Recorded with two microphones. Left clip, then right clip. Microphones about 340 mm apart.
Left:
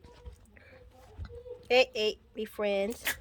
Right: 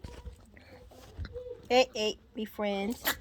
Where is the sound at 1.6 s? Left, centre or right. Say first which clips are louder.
Left 1 dB; centre.